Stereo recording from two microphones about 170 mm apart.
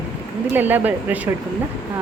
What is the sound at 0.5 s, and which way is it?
Speech, 10° right (ahead or behind).